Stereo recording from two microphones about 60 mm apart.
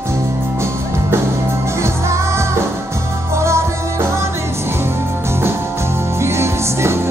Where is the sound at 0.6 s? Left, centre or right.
Right.